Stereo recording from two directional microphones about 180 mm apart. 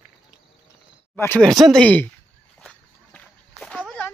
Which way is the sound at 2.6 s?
5° left (ahead or behind).